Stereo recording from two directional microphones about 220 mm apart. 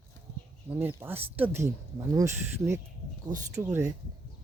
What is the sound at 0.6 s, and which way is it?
Speech, 10° right (ahead or behind).